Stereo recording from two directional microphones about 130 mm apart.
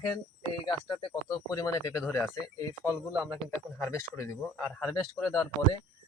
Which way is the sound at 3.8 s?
20° left (ahead or behind).